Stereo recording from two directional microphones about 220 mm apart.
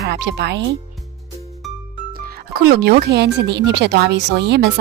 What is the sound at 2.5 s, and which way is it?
A woman's voice, 45° right (ahead or behind).